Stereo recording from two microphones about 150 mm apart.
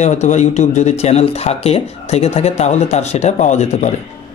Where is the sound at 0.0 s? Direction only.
50° left (ahead or behind).